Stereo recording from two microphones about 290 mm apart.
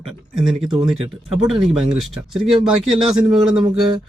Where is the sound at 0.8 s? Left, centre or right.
Centre.